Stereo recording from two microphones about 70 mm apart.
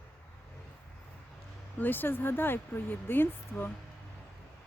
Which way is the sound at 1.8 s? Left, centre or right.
Left.